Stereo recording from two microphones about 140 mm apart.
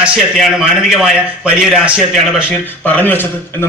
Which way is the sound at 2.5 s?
15° left (ahead or behind).